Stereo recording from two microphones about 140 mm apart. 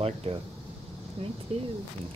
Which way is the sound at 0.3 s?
50° right (ahead or behind).